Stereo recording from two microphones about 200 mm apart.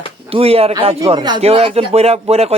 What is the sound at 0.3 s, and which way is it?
A man's voice, 30° right (ahead or behind).